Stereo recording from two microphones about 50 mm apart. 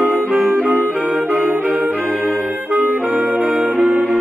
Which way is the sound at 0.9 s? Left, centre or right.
Right.